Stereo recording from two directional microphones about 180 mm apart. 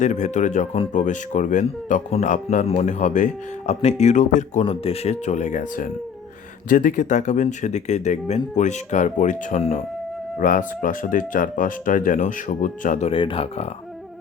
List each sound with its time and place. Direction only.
0.0 s speech: 40° left (ahead or behind)
4.6 s speech: 35° left (ahead or behind)
13.1 s speech: 30° left (ahead or behind)